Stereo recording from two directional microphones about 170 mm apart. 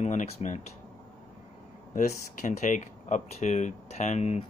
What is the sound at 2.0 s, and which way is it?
Speech, 50° left (ahead or behind).